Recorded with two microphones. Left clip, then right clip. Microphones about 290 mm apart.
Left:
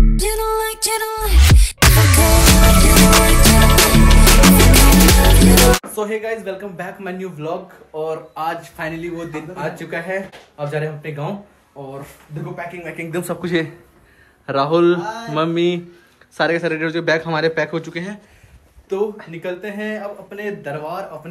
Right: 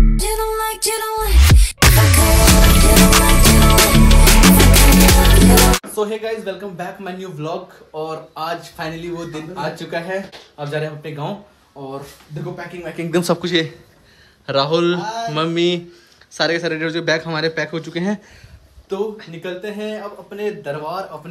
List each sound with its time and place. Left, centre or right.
0.1 s music: centre
5.9 s speech: centre
12.9 s speech: right
13.4 s a man's voice: centre
19.4 s speech: centre